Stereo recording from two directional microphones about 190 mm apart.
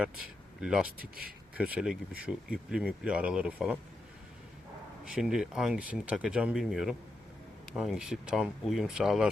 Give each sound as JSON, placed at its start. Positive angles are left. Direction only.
{"t": 0.6, "sound": "speech", "side_deg": -5}
{"t": 0.9, "sound": "speech", "side_deg": -50}
{"t": 1.5, "sound": "speech", "side_deg": -5}
{"t": 5.0, "sound": "speech", "side_deg": -5}